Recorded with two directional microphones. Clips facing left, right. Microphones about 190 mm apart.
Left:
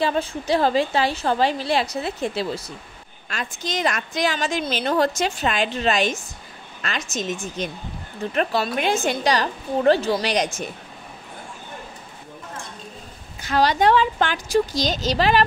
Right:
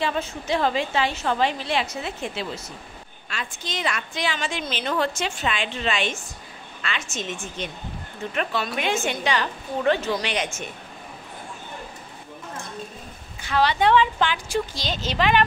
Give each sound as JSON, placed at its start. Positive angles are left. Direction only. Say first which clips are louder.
{"t": 0.0, "sound": "a woman's voice", "louder": "left 4 dB", "side_deg": 35}
{"t": 13.4, "sound": "a woman's voice", "louder": "left 2 dB", "side_deg": 40}